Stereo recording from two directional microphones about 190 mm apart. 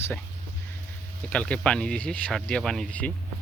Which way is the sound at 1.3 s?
5° left (ahead or behind).